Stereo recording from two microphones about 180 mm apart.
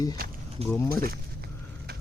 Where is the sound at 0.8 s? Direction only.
55° right (ahead or behind).